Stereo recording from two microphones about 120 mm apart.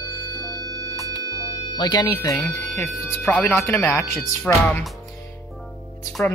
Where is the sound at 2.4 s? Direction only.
10° left (ahead or behind).